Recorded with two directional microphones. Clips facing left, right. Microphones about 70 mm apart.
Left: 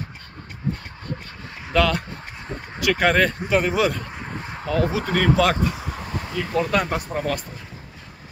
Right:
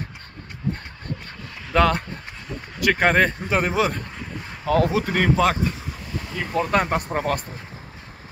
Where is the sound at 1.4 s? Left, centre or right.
Left.